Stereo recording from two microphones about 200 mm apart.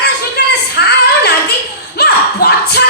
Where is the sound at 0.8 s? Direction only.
55° left (ahead or behind).